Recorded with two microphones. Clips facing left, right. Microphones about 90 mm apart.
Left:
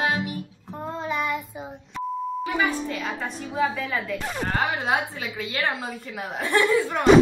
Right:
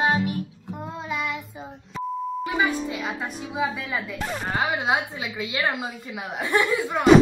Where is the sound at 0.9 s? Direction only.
Centre (ahead or behind).